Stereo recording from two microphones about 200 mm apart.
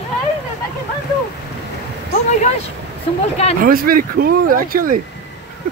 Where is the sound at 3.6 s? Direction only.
45° right (ahead or behind).